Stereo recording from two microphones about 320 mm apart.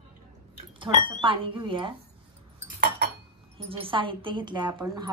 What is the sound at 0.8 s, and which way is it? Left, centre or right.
Speech, centre.